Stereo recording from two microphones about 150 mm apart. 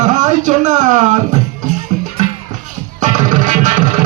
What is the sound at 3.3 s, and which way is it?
Music, 55° right (ahead or behind).